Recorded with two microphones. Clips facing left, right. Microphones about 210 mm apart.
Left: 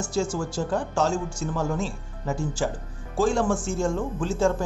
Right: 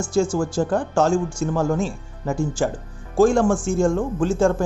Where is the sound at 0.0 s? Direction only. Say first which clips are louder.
Right 6 dB; 50° right (ahead or behind).